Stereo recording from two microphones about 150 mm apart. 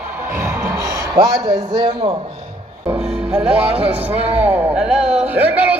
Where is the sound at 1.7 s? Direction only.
45° right (ahead or behind).